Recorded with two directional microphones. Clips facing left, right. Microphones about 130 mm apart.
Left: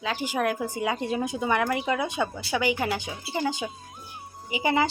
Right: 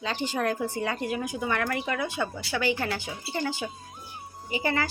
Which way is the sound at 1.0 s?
25° left (ahead or behind).